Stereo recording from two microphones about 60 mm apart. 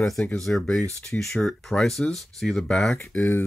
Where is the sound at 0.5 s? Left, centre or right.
Centre.